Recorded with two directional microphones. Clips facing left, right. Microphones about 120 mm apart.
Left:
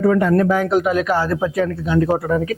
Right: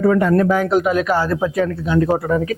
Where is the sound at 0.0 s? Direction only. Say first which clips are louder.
Right 1 dB; 25° right (ahead or behind).